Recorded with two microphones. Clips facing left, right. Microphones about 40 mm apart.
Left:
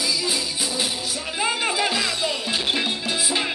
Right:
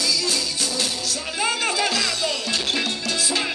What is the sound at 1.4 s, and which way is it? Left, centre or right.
Music, centre.